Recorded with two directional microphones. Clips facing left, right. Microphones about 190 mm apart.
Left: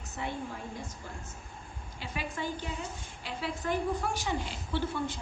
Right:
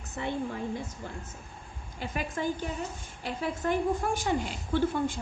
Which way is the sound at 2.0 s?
45° right (ahead or behind).